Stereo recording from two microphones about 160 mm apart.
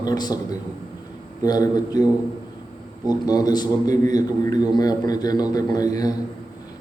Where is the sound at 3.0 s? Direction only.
25° left (ahead or behind).